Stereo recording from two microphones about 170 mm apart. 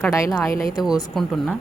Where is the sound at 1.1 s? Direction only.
Centre (ahead or behind).